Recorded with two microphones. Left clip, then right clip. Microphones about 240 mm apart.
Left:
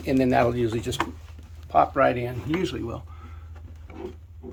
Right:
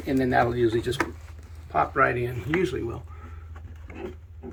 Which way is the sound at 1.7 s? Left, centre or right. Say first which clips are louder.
Left 3 dB; left.